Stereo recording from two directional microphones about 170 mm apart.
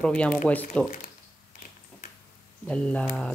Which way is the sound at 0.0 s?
5° left (ahead or behind).